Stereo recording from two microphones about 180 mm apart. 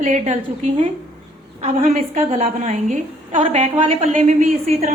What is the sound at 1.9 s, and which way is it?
A woman's voice, 35° right (ahead or behind).